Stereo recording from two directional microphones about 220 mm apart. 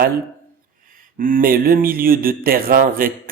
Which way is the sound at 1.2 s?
40° right (ahead or behind).